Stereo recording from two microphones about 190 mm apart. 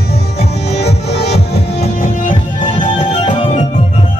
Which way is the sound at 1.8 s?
45° left (ahead or behind).